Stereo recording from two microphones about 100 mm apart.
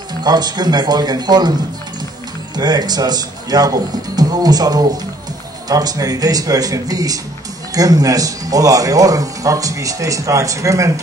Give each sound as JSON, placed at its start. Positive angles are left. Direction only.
{"t": 0.2, "sound": "a man's voice", "side_deg": -45}
{"t": 2.5, "sound": "speech", "side_deg": -45}